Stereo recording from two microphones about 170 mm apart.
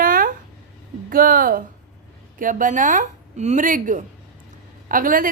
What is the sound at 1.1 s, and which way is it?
A woman's voice, 55° right (ahead or behind).